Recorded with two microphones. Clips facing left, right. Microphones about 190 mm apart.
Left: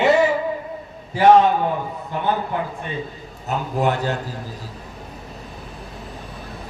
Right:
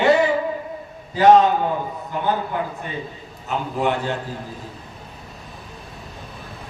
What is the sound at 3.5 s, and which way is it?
Speech, 40° left (ahead or behind).